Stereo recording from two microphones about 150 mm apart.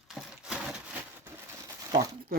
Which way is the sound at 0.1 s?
5° right (ahead or behind).